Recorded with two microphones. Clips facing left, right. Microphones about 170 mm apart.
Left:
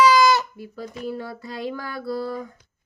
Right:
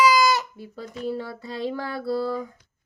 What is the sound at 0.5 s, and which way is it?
Child singing, 25° right (ahead or behind).